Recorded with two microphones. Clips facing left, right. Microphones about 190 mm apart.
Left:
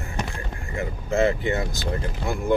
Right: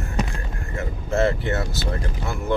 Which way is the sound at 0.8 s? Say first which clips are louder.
Even; 15° left (ahead or behind).